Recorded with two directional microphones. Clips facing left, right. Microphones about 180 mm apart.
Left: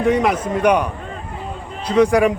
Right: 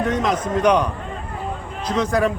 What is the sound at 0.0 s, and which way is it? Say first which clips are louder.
Speech: left 4 dB; 10° left (ahead or behind).